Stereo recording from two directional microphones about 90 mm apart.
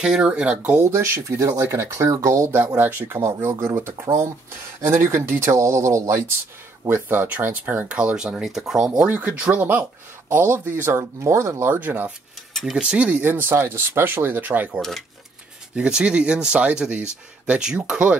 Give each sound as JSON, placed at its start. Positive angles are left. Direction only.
{"t": 0.0, "sound": "speech", "side_deg": -10}
{"t": 0.7, "sound": "speech", "side_deg": -30}
{"t": 2.6, "sound": "speech", "side_deg": -20}
{"t": 6.9, "sound": "speech", "side_deg": -20}
{"t": 12.6, "sound": "speech", "side_deg": -10}
{"t": 14.8, "sound": "speech", "side_deg": 5}
{"t": 15.7, "sound": "speech", "side_deg": -10}